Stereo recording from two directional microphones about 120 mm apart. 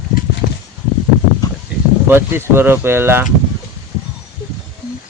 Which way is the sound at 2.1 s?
20° right (ahead or behind).